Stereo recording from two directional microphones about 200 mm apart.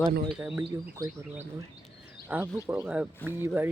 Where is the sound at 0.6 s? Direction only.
20° right (ahead or behind).